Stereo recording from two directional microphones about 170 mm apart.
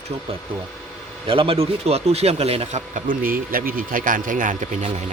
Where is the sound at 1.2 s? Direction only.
35° right (ahead or behind).